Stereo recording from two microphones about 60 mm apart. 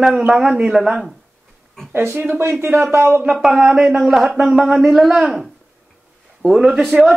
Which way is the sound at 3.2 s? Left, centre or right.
Centre.